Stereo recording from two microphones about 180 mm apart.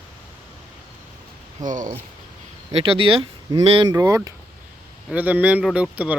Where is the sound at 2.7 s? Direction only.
30° right (ahead or behind).